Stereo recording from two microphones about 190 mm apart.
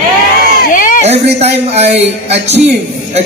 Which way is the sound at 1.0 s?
35° right (ahead or behind).